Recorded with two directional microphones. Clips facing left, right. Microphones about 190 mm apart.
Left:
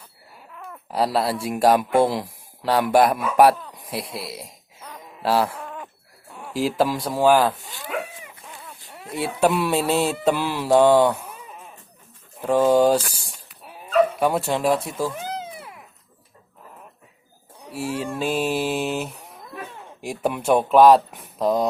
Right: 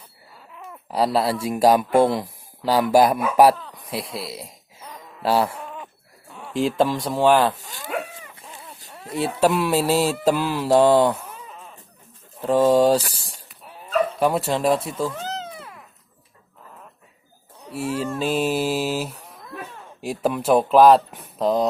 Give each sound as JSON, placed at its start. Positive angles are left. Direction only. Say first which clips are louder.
{"t": 0.5, "sound": "a sound", "louder": "left 1 dB", "side_deg": -10}
{"t": 0.9, "sound": "speech", "louder": "right 1 dB", "side_deg": 0}
{"t": 3.8, "sound": "a sound", "louder": "right 1 dB", "side_deg": 0}
{"t": 5.2, "sound": "livestock", "louder": "right 1 dB", "side_deg": 0}
{"t": 6.5, "sound": "speech", "louder": "right 1 dB", "side_deg": 5}
{"t": 7.6, "sound": "dog", "louder": "even", "side_deg": -40}
{"t": 8.9, "sound": "a sound", "louder": "right 3 dB", "side_deg": 15}
{"t": 9.4, "sound": "speech", "louder": "even", "side_deg": 0}
{"t": 12.4, "sound": "speech", "louder": "right 1 dB", "side_deg": 0}
{"t": 14.9, "sound": "cat", "louder": "even", "side_deg": 10}
{"t": 17.7, "sound": "speech", "louder": "right 1 dB", "side_deg": 0}